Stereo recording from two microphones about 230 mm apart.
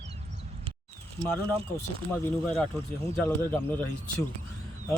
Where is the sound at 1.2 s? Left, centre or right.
Right.